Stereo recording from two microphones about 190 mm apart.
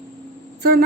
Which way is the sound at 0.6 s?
55° right (ahead or behind).